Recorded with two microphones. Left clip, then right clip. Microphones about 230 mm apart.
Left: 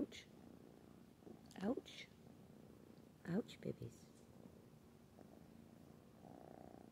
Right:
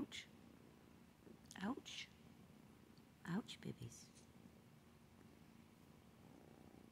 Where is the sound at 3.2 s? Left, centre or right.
Right.